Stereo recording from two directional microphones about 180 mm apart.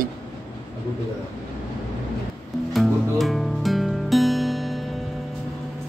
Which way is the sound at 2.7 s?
Centre (ahead or behind).